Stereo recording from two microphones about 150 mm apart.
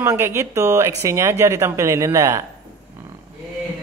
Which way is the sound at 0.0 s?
20° right (ahead or behind).